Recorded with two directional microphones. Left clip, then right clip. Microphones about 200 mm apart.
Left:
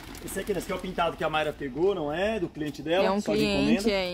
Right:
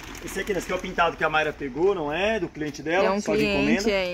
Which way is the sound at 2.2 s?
10° right (ahead or behind).